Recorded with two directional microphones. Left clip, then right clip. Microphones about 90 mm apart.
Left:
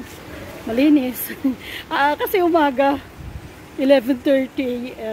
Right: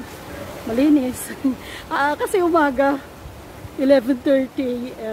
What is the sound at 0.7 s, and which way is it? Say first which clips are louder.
A woman's voice: left 1 dB; 20° left (ahead or behind).